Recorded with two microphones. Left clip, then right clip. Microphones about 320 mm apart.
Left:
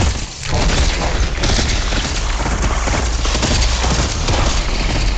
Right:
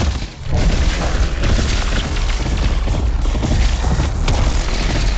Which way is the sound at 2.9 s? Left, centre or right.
Left.